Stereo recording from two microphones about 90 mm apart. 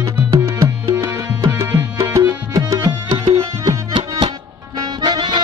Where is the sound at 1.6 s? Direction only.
40° right (ahead or behind).